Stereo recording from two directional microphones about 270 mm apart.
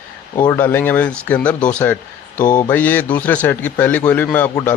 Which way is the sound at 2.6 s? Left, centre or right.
Centre.